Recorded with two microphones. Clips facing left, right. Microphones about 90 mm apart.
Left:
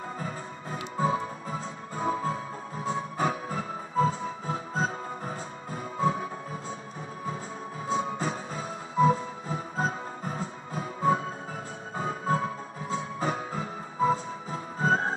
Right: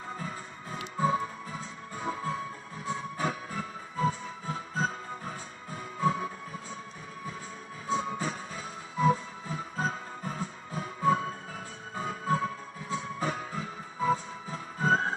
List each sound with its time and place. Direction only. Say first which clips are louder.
0.2 s music: left 3 dB; 35° left (ahead or behind)
7.9 s music: left 2 dB; 35° left (ahead or behind)
12.0 s music: left 2 dB; 30° left (ahead or behind)